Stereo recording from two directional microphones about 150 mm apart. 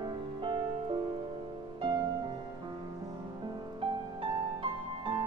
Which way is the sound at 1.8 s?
35° right (ahead or behind).